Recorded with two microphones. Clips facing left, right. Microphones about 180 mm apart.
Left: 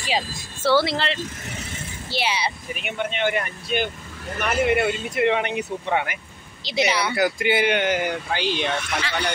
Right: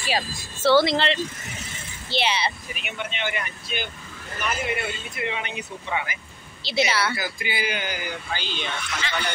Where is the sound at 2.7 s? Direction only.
50° left (ahead or behind).